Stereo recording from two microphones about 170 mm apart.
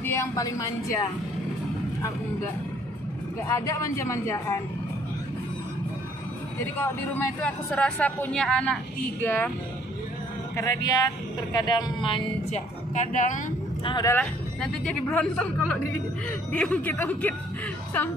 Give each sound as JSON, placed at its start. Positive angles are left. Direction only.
{"t": 0.0, "sound": "a woman's voice", "side_deg": 15}
{"t": 3.4, "sound": "speech", "side_deg": 20}
{"t": 6.8, "sound": "speech", "side_deg": 10}
{"t": 10.5, "sound": "speech", "side_deg": 20}
{"t": 12.9, "sound": "speech", "side_deg": 50}
{"t": 13.8, "sound": "speech", "side_deg": 25}
{"t": 14.1, "sound": "speech", "side_deg": 10}